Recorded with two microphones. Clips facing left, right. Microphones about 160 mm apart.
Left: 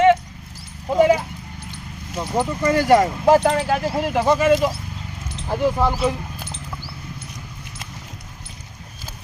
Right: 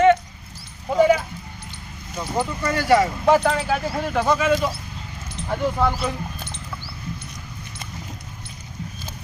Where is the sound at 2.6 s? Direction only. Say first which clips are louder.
Left 3 dB; 45° left (ahead or behind).